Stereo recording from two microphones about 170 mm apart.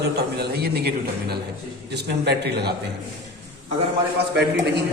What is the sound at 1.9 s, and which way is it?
Speech, 75° right (ahead or behind).